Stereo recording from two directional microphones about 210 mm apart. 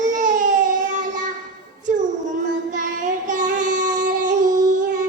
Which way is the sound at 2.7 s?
35° right (ahead or behind).